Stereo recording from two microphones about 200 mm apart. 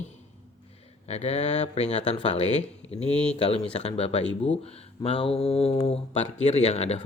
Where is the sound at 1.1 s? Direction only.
30° left (ahead or behind).